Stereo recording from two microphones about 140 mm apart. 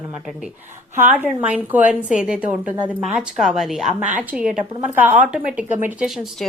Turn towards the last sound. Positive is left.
turn(degrees=-15)  # may be behind; listen again after turning